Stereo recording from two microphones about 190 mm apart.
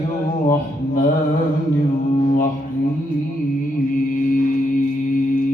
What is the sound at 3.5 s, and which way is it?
Mantra, 45° left (ahead or behind).